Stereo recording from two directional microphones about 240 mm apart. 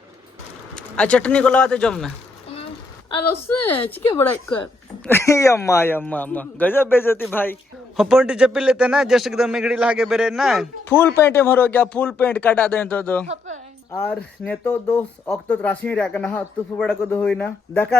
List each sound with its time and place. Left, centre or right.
0.8 s speech: centre
3.8 s a man's voice: centre
11.2 s a man's voice: centre
13.2 s a sound: right
13.9 s speech: centre